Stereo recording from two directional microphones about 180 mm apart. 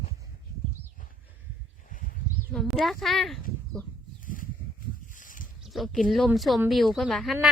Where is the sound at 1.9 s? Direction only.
45° left (ahead or behind).